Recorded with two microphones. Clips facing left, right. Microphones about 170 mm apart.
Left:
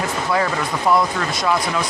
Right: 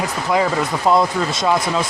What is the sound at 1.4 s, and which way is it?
Speech, 25° right (ahead or behind).